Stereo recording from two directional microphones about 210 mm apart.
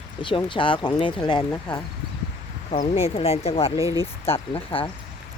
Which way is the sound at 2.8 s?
25° left (ahead or behind).